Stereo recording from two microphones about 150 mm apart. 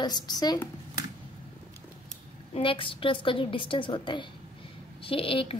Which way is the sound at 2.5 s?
35° left (ahead or behind).